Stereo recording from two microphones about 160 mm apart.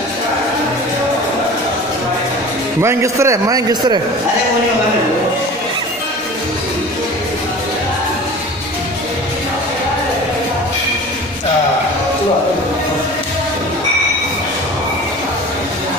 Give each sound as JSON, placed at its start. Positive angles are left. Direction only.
{"t": 2.8, "sound": "a man's voice", "side_deg": -15}